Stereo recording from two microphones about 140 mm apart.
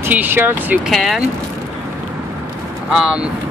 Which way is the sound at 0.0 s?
15° right (ahead or behind).